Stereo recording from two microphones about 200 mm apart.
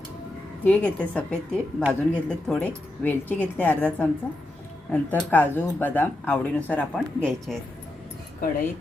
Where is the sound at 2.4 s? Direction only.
5° left (ahead or behind).